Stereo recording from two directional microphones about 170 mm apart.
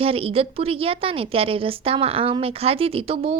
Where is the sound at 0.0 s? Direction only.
35° right (ahead or behind).